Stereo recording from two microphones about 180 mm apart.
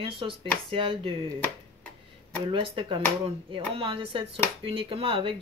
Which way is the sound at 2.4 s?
30° right (ahead or behind).